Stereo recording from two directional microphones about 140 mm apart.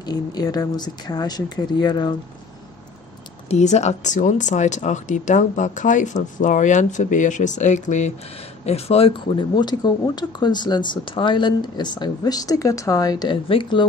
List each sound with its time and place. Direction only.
0.0 s speech: 30° left (ahead or behind)
3.4 s speech: 55° left (ahead or behind)
8.6 s speech: 45° left (ahead or behind)